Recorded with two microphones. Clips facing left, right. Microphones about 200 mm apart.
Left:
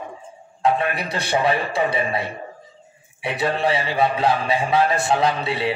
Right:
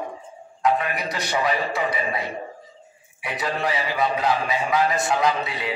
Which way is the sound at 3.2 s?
30° left (ahead or behind).